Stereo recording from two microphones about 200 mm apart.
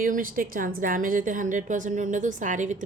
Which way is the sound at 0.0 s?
45° right (ahead or behind).